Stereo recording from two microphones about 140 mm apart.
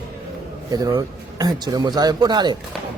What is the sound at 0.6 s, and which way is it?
A man's voice, 25° right (ahead or behind).